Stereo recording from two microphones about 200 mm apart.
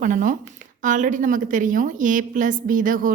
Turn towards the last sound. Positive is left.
turn(degrees=-45)  # may be behind; listen again after turning